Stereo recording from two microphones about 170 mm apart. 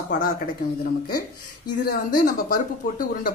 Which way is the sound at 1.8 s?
60° left (ahead or behind).